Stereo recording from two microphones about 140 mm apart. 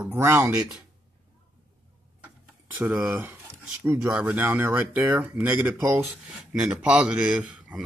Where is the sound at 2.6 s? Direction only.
15° right (ahead or behind).